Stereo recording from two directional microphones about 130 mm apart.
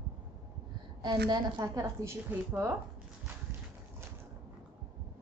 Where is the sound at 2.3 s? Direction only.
10° right (ahead or behind).